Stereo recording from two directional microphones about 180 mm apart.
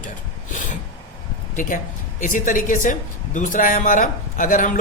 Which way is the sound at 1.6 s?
45° left (ahead or behind).